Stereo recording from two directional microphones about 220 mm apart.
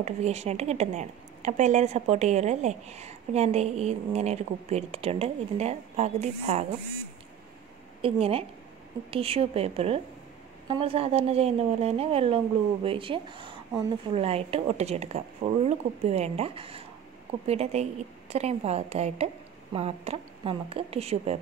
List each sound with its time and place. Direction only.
0.0 s speech: 30° right (ahead or behind)
8.0 s speech: 25° right (ahead or behind)